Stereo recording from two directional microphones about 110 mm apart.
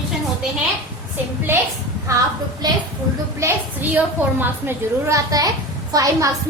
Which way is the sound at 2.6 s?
35° right (ahead or behind).